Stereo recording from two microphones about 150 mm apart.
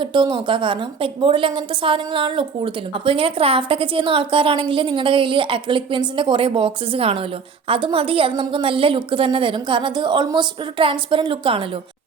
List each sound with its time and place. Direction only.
0.0 s a woman's voice: 30° right (ahead or behind)